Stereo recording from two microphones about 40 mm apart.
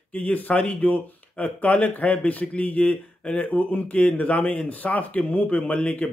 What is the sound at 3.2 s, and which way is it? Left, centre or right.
Speech, left.